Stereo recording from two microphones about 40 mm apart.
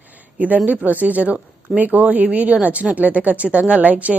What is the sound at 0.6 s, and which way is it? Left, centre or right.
A woman's voice, right.